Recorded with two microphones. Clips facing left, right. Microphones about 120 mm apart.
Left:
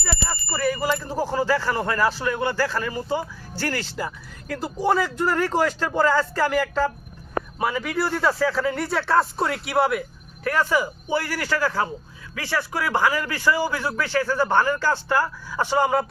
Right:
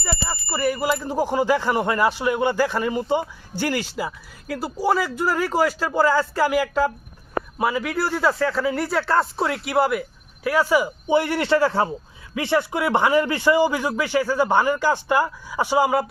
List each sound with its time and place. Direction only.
0.0 s speech: 10° right (ahead or behind)